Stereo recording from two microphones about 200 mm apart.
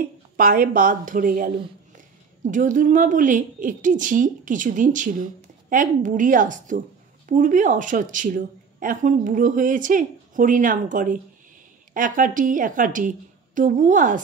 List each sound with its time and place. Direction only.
0.4 s a woman's voice: 45° right (ahead or behind)